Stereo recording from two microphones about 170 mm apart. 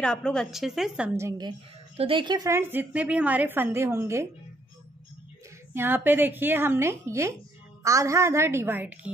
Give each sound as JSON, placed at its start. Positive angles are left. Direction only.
{"t": 0.0, "sound": "a woman's voice", "side_deg": 5}
{"t": 1.1, "sound": "a woman's voice", "side_deg": -15}
{"t": 2.0, "sound": "a woman's voice", "side_deg": -30}
{"t": 5.8, "sound": "a woman's voice", "side_deg": -10}